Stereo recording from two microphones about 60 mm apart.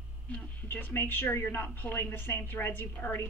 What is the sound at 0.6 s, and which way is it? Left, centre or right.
A woman's voice, left.